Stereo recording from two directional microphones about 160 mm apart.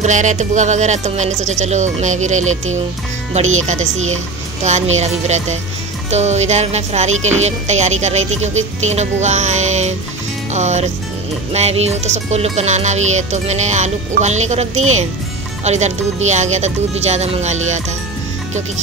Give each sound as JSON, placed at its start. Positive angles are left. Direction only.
{"t": 0.0, "sound": "speech", "side_deg": -50}